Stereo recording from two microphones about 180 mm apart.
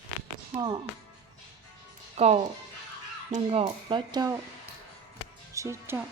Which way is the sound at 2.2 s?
35° right (ahead or behind).